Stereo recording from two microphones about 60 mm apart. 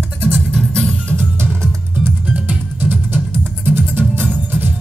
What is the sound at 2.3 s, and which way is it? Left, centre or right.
Music, right.